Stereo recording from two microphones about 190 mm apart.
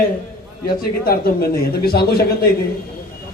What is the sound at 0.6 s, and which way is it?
A man's voice, 50° left (ahead or behind).